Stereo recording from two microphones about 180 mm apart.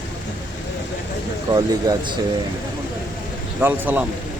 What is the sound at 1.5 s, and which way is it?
Speech, 20° right (ahead or behind).